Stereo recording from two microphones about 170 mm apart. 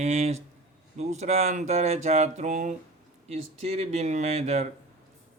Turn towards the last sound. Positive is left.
turn(degrees=-40)  # may be behind; listen again after turning